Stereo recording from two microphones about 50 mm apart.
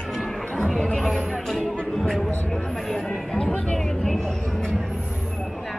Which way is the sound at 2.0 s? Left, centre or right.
Centre.